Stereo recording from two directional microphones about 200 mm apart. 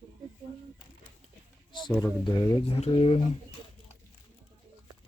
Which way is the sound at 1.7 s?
20° left (ahead or behind).